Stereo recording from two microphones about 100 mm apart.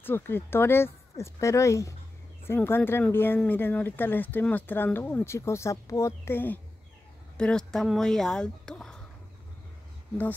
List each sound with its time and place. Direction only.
0.0 s speech: 20° left (ahead or behind)
7.3 s speech: 10° left (ahead or behind)